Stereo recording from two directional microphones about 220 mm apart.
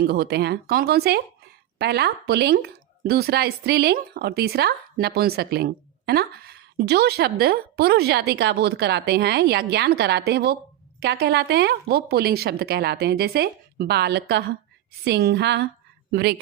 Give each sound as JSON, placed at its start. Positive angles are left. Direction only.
{"t": 0.0, "sound": "speech", "side_deg": -45}